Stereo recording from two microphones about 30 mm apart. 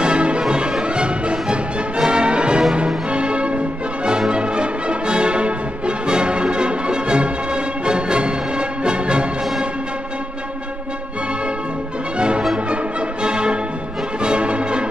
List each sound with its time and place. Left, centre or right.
0.0 s music: right
12.2 s music: right